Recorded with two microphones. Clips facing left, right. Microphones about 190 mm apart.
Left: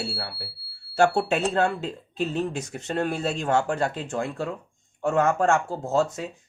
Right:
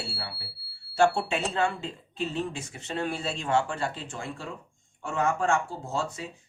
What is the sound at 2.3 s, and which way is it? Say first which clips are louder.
Speech: left 5 dB; 40° left (ahead or behind).